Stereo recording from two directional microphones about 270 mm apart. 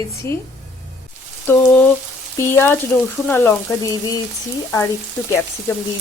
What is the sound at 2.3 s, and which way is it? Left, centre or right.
Speech, centre.